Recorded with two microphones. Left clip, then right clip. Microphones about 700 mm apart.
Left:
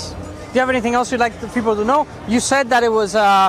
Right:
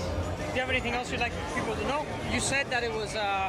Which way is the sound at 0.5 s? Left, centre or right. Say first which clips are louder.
Left 14 dB; left.